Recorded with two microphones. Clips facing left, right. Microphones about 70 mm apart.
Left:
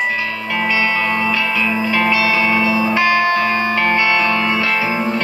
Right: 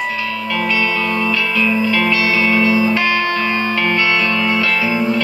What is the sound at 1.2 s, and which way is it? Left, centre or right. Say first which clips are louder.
Music: right 1 dB; centre.